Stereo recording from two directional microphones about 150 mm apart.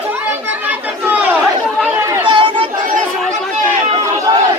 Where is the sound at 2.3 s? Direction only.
35° right (ahead or behind).